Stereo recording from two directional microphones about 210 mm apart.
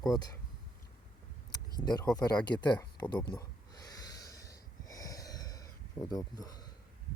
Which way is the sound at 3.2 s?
20° left (ahead or behind).